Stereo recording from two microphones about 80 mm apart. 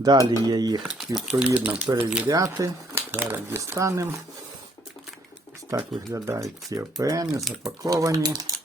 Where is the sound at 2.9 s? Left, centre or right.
Right.